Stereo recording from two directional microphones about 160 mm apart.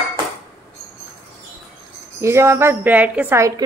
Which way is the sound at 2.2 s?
15° right (ahead or behind).